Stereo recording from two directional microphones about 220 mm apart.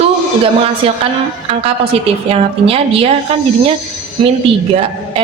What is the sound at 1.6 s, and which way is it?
A woman's voice, 25° right (ahead or behind).